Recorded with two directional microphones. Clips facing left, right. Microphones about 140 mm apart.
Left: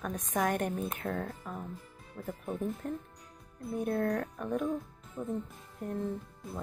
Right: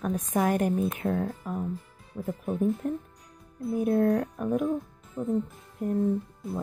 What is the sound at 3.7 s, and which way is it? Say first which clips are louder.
Speech: right 7 dB; 5° right (ahead or behind).